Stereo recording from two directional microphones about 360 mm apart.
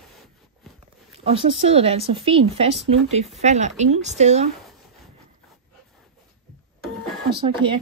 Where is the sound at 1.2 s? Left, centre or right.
Centre.